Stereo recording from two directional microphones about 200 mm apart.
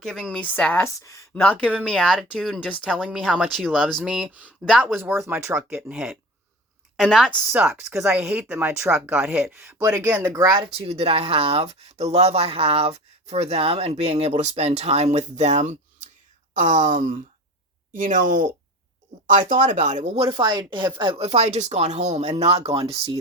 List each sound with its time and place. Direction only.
0.0 s a woman's voice: centre (ahead or behind); by 10.7 s 15° right (ahead or behind)
10.7 s speech: 30° right (ahead or behind)